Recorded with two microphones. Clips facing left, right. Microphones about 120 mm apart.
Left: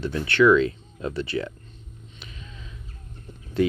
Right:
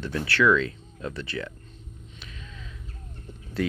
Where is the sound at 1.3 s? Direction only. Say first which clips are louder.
Left 6 dB; 25° left (ahead or behind).